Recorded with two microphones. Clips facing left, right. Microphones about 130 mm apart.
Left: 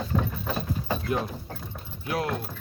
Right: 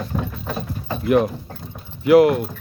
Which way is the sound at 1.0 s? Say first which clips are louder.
Right 11 dB; 85° right.